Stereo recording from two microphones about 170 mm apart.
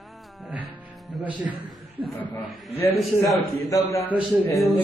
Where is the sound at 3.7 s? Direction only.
20° left (ahead or behind).